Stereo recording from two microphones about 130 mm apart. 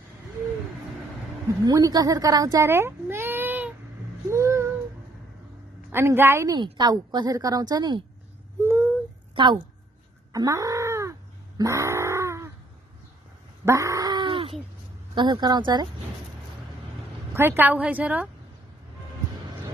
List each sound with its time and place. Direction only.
1.6 s speech: 30° right (ahead or behind); by 3.7 s 15° right (ahead or behind)
4.3 s a sound: 20° right (ahead or behind)
5.9 s a woman's voice: 20° right (ahead or behind)
6.5 s a woman's voice: 30° right (ahead or behind)
9.3 s a woman's voice: 40° right (ahead or behind)
10.3 s a sound: 25° right (ahead or behind)
13.7 s a sound: 25° right (ahead or behind)
15.1 s a woman's voice: 35° right (ahead or behind)
17.3 s a woman's voice: 15° right (ahead or behind)